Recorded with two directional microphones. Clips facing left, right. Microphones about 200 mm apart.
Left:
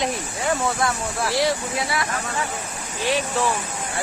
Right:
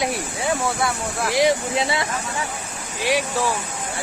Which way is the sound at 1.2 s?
15° right (ahead or behind).